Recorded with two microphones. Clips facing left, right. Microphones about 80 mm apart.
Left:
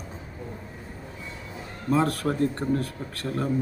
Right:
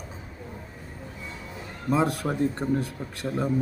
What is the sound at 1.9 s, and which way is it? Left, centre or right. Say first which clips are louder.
Speech: left 1 dB; centre.